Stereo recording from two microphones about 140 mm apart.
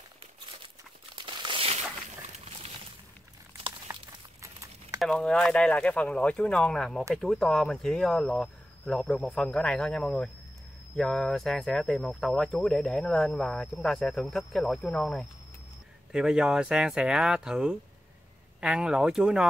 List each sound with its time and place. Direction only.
1.1 s crumpling: 35° right (ahead or behind)
3.8 s a sound: 25° right (ahead or behind)
5.0 s speech: 5° left (ahead or behind)